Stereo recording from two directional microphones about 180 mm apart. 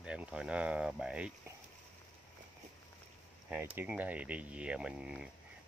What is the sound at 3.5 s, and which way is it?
Speech, 10° right (ahead or behind).